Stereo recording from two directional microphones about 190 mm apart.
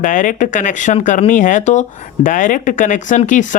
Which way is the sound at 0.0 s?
45° left (ahead or behind).